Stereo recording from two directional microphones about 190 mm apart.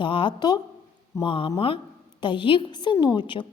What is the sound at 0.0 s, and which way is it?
A woman's voice, 25° left (ahead or behind).